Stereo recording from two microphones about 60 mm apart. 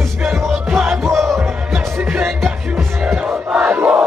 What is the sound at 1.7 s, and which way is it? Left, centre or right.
Music, centre.